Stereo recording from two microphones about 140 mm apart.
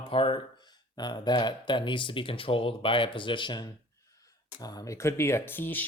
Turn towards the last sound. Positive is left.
turn(degrees=15)  # may be behind; listen again after turning